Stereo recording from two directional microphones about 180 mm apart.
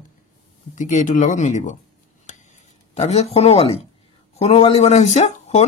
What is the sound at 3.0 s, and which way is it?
Speech, 35° left (ahead or behind).